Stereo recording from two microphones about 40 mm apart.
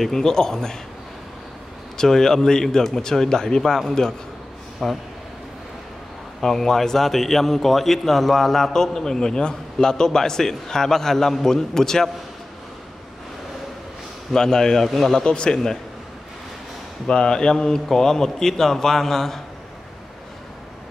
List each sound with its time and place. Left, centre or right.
0.0 s a man's voice: centre
2.0 s a man's voice: centre
4.8 s a man's voice: centre
6.4 s a man's voice: centre
14.3 s a man's voice: centre
14.9 s a man's voice: centre
15.1 s a man's voice: left
17.1 s a man's voice: left